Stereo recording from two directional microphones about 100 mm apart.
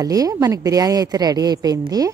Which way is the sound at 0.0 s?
35° right (ahead or behind).